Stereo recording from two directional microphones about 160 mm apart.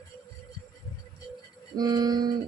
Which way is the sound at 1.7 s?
25° right (ahead or behind).